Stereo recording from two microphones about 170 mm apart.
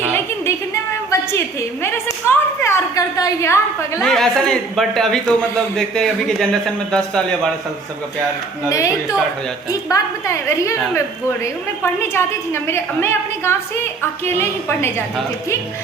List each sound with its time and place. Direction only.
1.8 s a woman's voice: 15° left (ahead or behind)
4.0 s a man's voice: 5° left (ahead or behind)
8.7 s a woman's voice: 20° left (ahead or behind)